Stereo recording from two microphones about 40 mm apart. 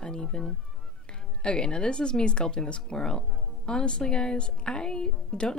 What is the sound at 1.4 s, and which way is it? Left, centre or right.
Speech, left.